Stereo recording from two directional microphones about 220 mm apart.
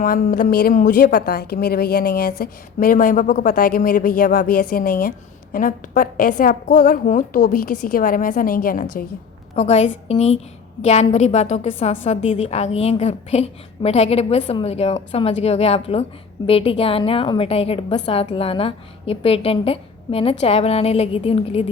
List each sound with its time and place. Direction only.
0.0 s a woman's voice: 40° left (ahead or behind)